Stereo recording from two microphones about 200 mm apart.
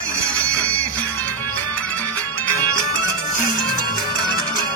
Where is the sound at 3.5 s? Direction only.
90° right.